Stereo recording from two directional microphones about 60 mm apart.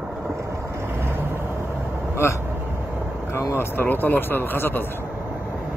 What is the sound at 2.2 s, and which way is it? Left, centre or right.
Speech, left.